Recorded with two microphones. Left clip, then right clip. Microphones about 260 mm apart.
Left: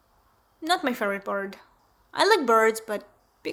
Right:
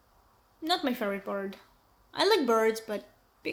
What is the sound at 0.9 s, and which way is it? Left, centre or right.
Speech, left.